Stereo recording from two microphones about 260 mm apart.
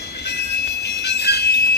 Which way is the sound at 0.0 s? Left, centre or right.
Left.